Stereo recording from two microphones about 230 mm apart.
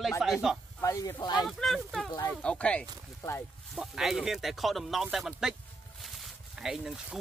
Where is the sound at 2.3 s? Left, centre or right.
Centre.